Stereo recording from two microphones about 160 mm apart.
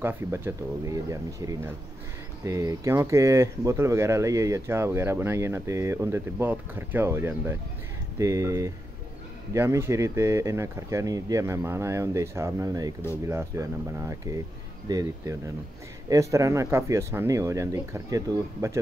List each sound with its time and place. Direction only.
0.0 s speech: 15° right (ahead or behind)